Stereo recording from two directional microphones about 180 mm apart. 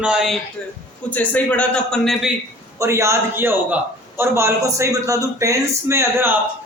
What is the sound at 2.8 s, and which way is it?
A man's voice, 15° right (ahead or behind).